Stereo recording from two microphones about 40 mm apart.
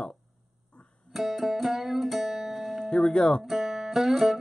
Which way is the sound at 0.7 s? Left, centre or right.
Left.